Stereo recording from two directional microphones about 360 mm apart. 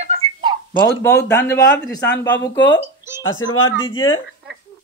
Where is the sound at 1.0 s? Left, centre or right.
Centre.